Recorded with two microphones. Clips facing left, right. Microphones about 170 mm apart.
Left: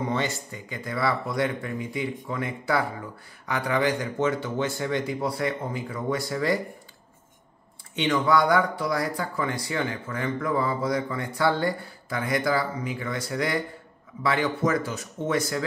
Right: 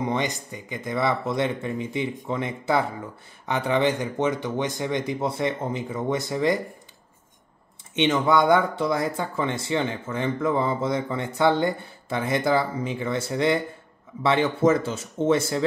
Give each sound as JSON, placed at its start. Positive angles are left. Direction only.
{"t": 0.0, "sound": "speech", "side_deg": -15}
{"t": 7.9, "sound": "speech", "side_deg": -20}